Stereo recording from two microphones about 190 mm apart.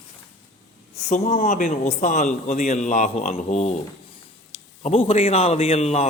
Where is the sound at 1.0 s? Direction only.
35° left (ahead or behind).